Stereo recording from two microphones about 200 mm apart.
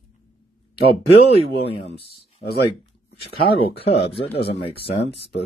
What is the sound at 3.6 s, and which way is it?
Speech, 30° left (ahead or behind).